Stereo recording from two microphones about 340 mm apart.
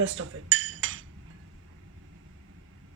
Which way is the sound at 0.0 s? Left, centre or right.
Right.